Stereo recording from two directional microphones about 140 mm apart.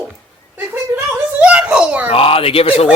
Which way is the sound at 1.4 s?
10° right (ahead or behind).